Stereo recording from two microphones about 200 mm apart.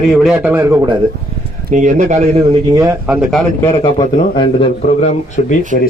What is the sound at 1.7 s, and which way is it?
Speech, 40° right (ahead or behind).